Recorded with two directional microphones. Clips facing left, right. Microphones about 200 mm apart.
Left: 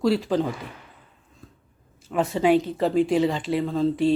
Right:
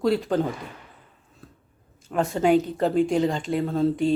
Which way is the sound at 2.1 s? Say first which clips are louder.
Even; centre (ahead or behind).